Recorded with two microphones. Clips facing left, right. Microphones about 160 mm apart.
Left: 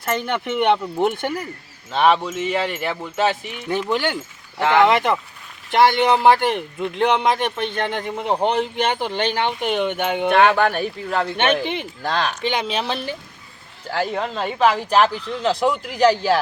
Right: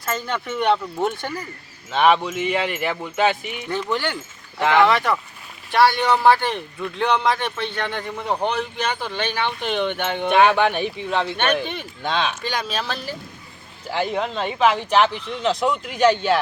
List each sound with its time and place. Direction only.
0.0 s speech: 20° left (ahead or behind)
1.9 s speech: centre (ahead or behind)
3.7 s speech: 15° left (ahead or behind)
11.5 s speech: 15° left (ahead or behind)
12.0 s speech: centre (ahead or behind)
12.4 s speech: 20° left (ahead or behind)
13.9 s speech: centre (ahead or behind)